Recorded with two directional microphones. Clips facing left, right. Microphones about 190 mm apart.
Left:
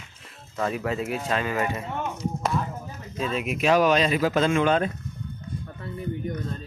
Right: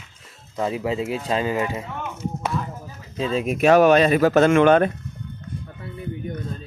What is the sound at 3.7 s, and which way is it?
Speech, 55° right (ahead or behind).